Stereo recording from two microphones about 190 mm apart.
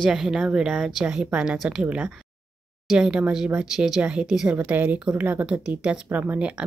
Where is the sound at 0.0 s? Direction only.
5° right (ahead or behind).